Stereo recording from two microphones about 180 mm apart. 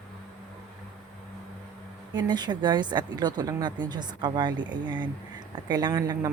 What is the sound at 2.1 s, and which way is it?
Speech, 25° right (ahead or behind).